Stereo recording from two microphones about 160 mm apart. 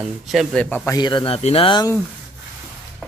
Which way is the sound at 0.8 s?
25° left (ahead or behind).